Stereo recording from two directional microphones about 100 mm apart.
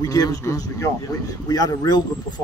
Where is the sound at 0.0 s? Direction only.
40° left (ahead or behind).